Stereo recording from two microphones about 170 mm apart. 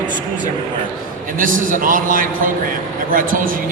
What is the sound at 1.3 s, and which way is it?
A man's voice, 50° right (ahead or behind).